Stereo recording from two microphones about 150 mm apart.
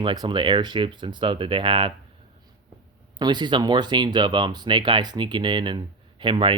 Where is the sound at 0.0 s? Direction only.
30° right (ahead or behind).